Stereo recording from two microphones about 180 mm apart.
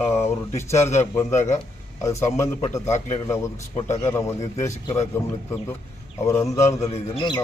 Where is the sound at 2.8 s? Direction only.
40° left (ahead or behind).